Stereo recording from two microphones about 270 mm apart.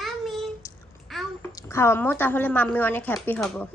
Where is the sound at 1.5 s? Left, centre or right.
Centre.